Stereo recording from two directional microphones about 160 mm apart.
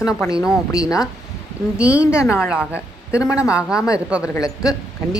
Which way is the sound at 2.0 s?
5° right (ahead or behind).